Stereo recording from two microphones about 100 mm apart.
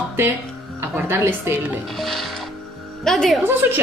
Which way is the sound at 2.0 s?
Centre (ahead or behind).